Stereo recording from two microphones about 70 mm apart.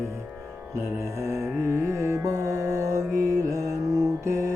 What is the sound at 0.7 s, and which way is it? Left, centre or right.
Music, right.